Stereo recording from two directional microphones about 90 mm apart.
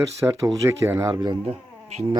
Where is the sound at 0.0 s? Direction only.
35° right (ahead or behind).